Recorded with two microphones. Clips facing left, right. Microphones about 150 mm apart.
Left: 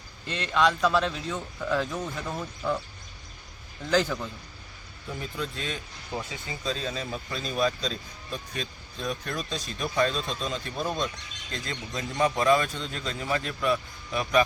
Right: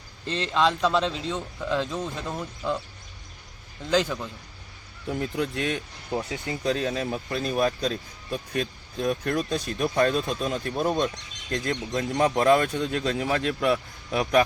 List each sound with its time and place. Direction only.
0.3 s a man's voice: 30° right (ahead or behind)
3.8 s a man's voice: 15° right (ahead or behind)
5.2 s a man's voice: 65° right (ahead or behind)